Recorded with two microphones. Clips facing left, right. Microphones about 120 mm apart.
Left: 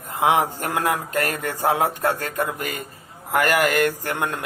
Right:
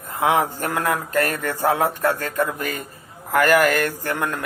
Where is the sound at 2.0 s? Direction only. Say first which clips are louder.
Right 1 dB; 40° left (ahead or behind).